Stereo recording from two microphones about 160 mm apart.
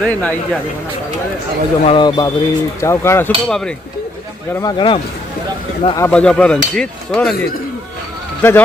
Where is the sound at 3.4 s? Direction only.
5° left (ahead or behind).